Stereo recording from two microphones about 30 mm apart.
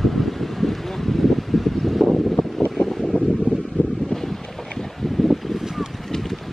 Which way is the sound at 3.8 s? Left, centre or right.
Left.